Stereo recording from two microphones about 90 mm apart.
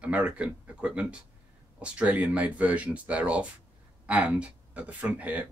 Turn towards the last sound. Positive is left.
turn(degrees=-15)  # may be behind; listen again after turning